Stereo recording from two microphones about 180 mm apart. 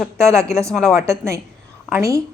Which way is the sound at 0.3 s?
15° right (ahead or behind).